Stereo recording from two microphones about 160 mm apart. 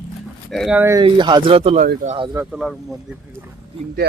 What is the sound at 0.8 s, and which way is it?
Speech, 15° right (ahead or behind).